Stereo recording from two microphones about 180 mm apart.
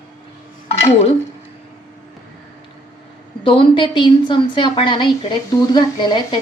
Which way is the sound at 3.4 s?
30° left (ahead or behind).